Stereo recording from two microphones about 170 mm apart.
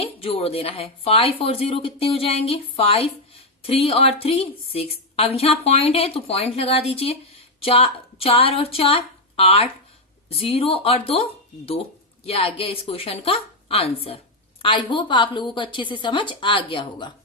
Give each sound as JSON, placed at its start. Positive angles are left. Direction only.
{"t": 0.0, "sound": "a woman's voice", "side_deg": 35}
{"t": 12.2, "sound": "a woman's voice", "side_deg": 35}